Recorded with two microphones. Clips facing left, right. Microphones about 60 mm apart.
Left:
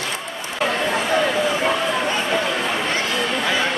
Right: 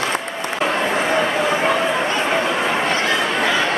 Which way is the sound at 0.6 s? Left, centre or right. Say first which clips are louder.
Right 1 dB; right.